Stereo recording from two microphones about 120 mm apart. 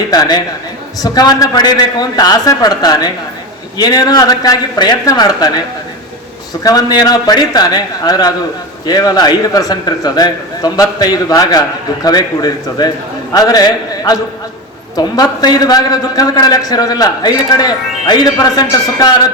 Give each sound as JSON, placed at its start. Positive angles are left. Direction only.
{"t": 0.1, "sound": "a man's voice", "side_deg": 35}